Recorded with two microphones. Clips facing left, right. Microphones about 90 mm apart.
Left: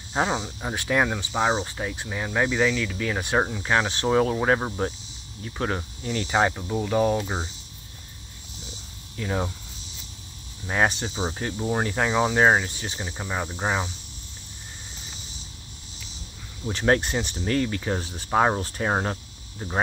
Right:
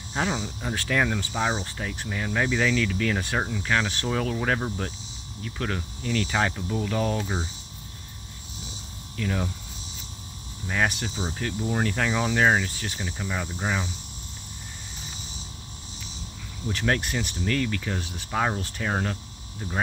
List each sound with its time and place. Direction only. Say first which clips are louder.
0.1 s speech: left 3 dB; 25° left (ahead or behind)
3.3 s speech: left 3 dB; 25° left (ahead or behind)
9.1 s speech: left 1 dB; 25° left (ahead or behind)
10.7 s speech: left 3 dB; 30° left (ahead or behind)
16.6 s speech: left 4 dB; 30° left (ahead or behind)